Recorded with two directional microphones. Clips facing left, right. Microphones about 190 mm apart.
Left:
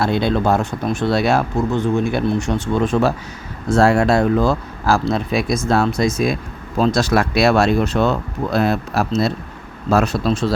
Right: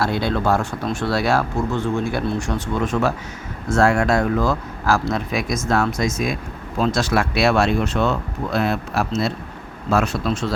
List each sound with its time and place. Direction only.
0.0 s speech: 20° left (ahead or behind)